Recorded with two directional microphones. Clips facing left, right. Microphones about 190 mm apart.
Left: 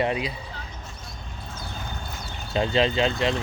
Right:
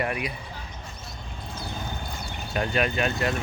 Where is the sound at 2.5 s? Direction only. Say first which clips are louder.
Left 4 dB; 25° left (ahead or behind).